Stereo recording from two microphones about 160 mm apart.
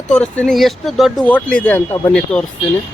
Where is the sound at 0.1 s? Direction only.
5° left (ahead or behind).